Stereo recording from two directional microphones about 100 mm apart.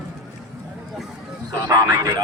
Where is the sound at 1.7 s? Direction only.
35° right (ahead or behind).